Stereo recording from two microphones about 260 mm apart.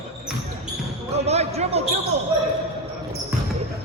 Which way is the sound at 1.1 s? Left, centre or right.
Right.